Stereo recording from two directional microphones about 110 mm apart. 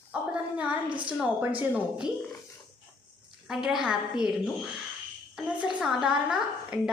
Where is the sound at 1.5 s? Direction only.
15° right (ahead or behind).